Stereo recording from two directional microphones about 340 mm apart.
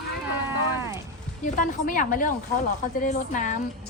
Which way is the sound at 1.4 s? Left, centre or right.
Left.